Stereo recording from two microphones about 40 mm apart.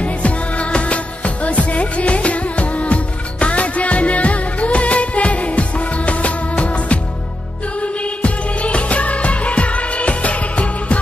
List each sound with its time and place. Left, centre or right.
0.0 s music: left
7.8 s music of bollywood: left